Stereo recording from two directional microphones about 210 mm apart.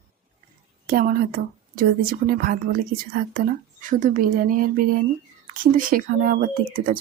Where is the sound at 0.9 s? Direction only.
45° right (ahead or behind).